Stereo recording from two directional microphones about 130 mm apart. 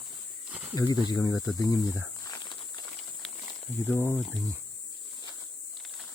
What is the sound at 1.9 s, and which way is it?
Snake, 25° left (ahead or behind).